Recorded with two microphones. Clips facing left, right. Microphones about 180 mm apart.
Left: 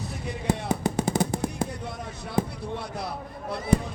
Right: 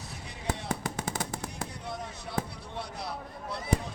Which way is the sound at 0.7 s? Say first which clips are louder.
Left 8 dB; 15° left (ahead or behind).